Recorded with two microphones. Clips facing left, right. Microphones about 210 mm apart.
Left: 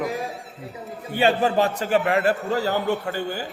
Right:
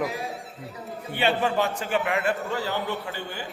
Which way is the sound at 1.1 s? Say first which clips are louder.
Left 4 dB; 40° left (ahead or behind).